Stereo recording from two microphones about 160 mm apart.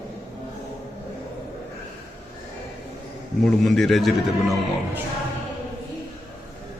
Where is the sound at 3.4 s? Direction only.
Centre (ahead or behind).